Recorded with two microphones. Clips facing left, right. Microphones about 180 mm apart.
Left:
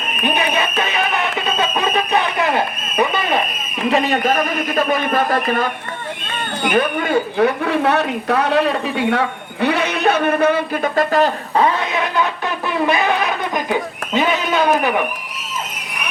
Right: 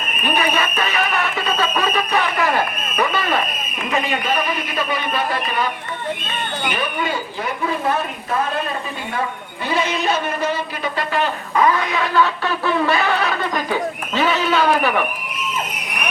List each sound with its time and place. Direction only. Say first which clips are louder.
0.3 s speech: right 1 dB; 20° left (ahead or behind)
1.5 s a sound: left 1 dB; 20° left (ahead or behind)
3.9 s a man's voice: left 4 dB; 40° left (ahead or behind)
6.7 s a man's voice: left 7 dB; 50° left (ahead or behind); by 14.9 s 15° left (ahead or behind)